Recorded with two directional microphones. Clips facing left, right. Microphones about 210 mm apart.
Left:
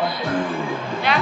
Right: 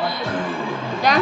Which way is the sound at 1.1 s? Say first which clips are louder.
Right 4 dB; 40° right (ahead or behind).